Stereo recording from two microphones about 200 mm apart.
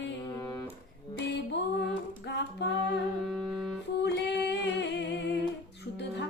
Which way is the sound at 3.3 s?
Centre (ahead or behind).